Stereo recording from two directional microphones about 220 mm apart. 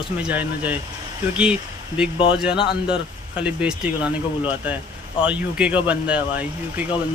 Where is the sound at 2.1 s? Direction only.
25° left (ahead or behind).